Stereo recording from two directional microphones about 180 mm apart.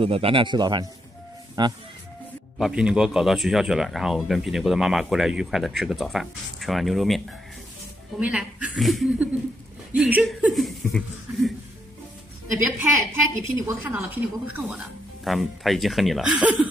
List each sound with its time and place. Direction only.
0.0 s speech: 30° right (ahead or behind)
2.6 s speech: 5° right (ahead or behind)
12.6 s a woman's voice: 10° right (ahead or behind)